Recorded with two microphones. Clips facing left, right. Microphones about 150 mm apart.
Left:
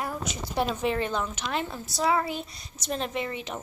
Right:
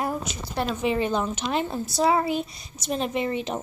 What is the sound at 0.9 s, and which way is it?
Speech, 15° right (ahead or behind).